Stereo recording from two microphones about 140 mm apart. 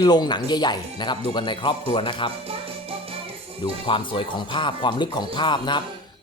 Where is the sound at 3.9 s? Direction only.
40° left (ahead or behind).